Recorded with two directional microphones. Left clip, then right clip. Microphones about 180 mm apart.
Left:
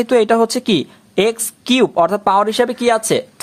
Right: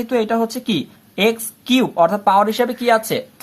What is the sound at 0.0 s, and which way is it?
Speech, 45° left (ahead or behind).